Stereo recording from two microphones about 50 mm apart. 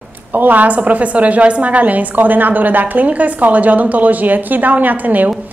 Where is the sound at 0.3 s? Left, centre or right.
Right.